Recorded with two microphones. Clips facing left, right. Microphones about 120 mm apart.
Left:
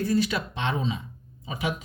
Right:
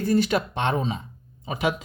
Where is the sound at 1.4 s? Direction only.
60° right (ahead or behind).